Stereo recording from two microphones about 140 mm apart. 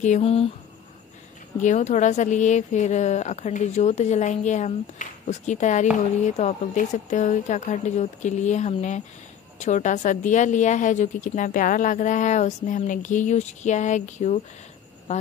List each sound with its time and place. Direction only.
0.0 s speech: 55° left (ahead or behind)
1.6 s a woman's voice: 60° left (ahead or behind)